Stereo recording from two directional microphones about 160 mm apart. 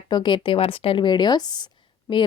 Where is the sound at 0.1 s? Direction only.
30° left (ahead or behind).